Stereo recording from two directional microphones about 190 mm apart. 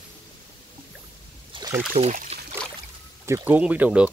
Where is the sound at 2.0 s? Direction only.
35° right (ahead or behind).